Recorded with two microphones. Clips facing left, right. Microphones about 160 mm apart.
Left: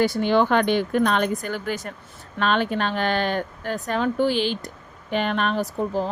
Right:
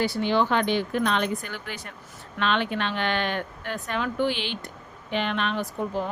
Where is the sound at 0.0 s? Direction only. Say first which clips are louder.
Left 4 dB; 50° left (ahead or behind).